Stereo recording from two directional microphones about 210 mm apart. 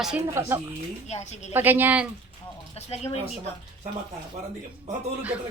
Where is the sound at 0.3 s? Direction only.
15° right (ahead or behind).